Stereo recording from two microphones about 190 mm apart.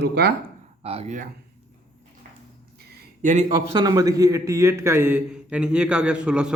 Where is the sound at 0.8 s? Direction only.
35° right (ahead or behind).